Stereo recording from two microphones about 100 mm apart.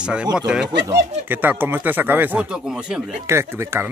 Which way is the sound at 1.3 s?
20° right (ahead or behind).